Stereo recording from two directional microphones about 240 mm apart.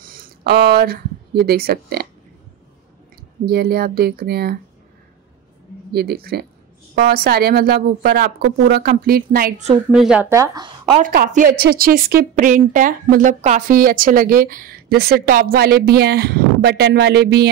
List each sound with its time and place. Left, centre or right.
0.0 s speech: right
3.4 s a woman's voice: right
5.9 s a woman's voice: right
9.8 s speech: centre
11.0 s a woman's voice: right